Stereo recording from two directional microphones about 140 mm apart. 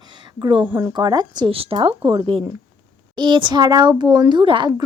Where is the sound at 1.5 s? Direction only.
40° right (ahead or behind).